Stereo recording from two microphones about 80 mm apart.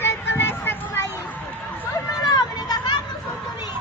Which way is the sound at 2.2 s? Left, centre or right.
Left.